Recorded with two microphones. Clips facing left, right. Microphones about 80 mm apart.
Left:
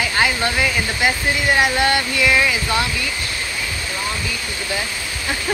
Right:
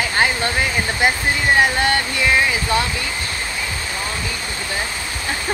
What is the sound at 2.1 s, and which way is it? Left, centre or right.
Speech, right.